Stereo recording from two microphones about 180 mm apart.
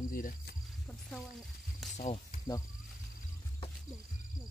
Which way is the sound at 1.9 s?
35° left (ahead or behind).